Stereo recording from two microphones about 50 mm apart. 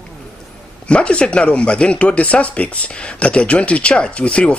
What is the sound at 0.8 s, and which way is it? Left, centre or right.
Speech, left.